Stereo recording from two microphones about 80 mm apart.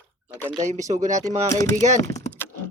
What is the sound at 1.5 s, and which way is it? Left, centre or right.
Speech, left.